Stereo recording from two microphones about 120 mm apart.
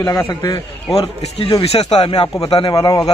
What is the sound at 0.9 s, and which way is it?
Speech, 55° left (ahead or behind).